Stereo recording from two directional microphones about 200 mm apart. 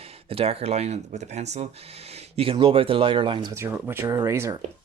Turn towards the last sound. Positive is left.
turn(degrees=-15)  # may be behind; listen again after turning